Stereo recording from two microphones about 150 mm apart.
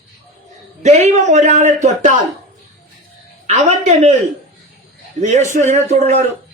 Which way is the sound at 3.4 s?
50° right (ahead or behind).